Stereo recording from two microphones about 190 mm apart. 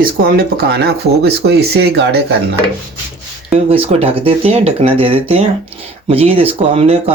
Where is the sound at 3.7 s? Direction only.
30° right (ahead or behind).